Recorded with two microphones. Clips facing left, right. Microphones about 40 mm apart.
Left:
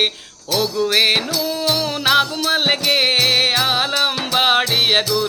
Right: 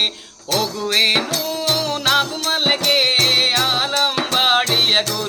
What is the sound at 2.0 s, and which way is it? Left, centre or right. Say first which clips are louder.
Music: left 3 dB; left.